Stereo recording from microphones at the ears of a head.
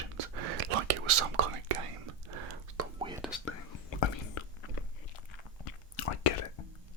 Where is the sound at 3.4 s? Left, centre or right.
Left.